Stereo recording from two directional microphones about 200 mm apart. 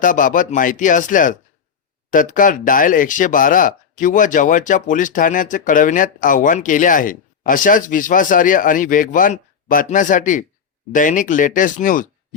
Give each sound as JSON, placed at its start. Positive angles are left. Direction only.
{"t": 0.0, "sound": "speech", "side_deg": 40}